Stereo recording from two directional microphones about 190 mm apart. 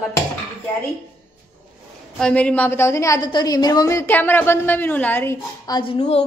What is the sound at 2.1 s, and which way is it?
A woman's voice, 5° left (ahead or behind).